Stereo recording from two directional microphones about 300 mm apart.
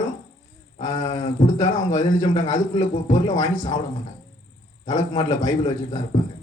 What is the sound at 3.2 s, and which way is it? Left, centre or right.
Speech, centre.